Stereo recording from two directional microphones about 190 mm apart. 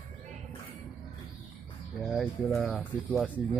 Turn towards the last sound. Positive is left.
turn(degrees=0)  # may be behind; listen again after turning